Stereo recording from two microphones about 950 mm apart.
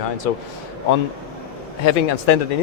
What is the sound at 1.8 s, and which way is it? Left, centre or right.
Speech, left.